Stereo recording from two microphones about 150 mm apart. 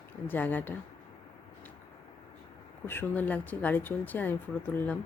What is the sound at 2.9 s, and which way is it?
Speech, 15° left (ahead or behind).